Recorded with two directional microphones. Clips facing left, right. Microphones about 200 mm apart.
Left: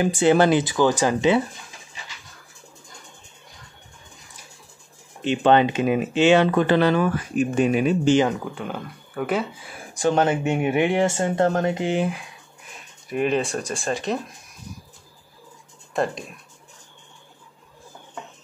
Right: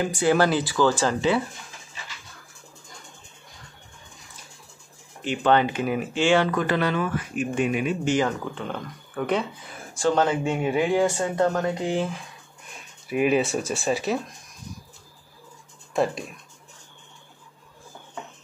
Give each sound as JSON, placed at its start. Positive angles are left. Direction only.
{"t": 0.0, "sound": "speech", "side_deg": 20}
{"t": 5.2, "sound": "speech", "side_deg": 25}
{"t": 8.3, "sound": "speech", "side_deg": 5}
{"t": 9.9, "sound": "speech", "side_deg": 20}
{"t": 13.1, "sound": "speech", "side_deg": -5}
{"t": 15.9, "sound": "speech", "side_deg": 0}